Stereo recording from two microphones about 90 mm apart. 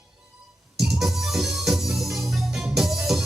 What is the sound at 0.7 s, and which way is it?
Music, 5° right (ahead or behind).